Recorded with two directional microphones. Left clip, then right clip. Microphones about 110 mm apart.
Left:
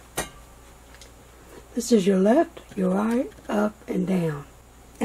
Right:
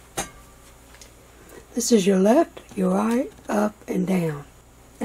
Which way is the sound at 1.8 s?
20° right (ahead or behind).